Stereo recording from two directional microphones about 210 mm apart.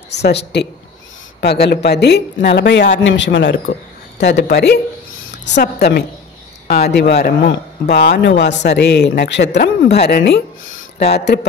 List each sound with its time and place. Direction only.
0.2 s a woman's voice: 55° left (ahead or behind)